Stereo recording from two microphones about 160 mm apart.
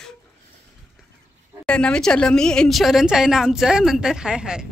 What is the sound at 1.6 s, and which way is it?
Speech, 5° left (ahead or behind).